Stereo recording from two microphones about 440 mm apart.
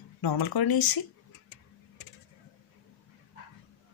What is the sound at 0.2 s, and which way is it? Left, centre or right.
Speech, left.